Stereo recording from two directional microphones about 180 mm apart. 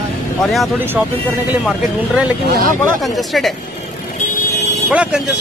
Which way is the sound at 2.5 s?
55° right (ahead or behind).